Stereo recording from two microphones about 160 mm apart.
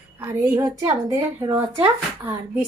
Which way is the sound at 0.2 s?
15° right (ahead or behind).